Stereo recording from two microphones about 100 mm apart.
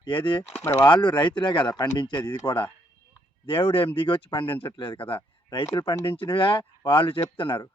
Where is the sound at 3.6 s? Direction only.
60° left (ahead or behind).